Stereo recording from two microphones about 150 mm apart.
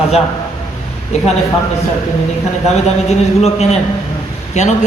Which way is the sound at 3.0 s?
45° left (ahead or behind).